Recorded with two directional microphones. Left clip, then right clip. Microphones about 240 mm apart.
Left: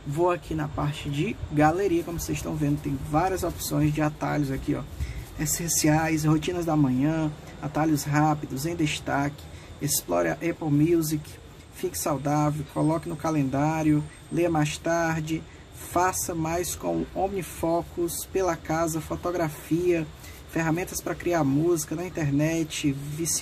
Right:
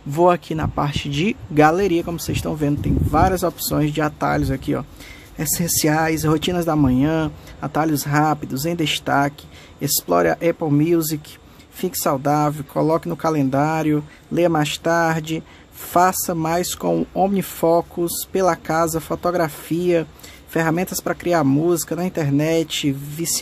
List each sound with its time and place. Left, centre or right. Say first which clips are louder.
0.2 s speech: right 9 dB; right